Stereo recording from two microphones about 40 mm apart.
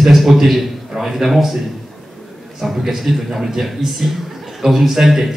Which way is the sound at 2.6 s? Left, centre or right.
Centre.